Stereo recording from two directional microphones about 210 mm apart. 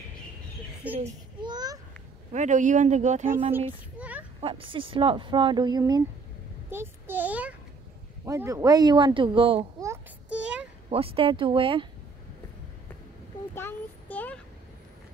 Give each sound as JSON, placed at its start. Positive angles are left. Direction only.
{"t": 0.9, "sound": "a sound", "side_deg": -25}
{"t": 2.3, "sound": "speech", "side_deg": -35}
{"t": 3.5, "sound": "child singing", "side_deg": -5}
{"t": 4.4, "sound": "a child's voice", "side_deg": -25}
{"t": 10.9, "sound": "speech", "side_deg": -25}
{"t": 13.6, "sound": "child singing", "side_deg": 10}